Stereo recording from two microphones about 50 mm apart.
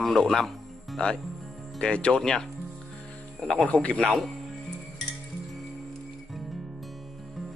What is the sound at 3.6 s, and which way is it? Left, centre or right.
Speech, left.